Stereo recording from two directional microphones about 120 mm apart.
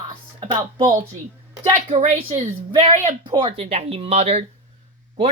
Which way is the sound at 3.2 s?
45° right (ahead or behind).